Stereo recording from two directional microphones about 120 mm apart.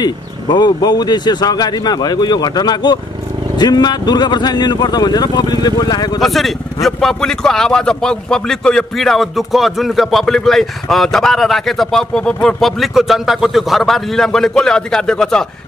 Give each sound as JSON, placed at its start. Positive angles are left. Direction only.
{"t": 0.0, "sound": "speech", "side_deg": 35}
{"t": 6.2, "sound": "speech", "side_deg": 0}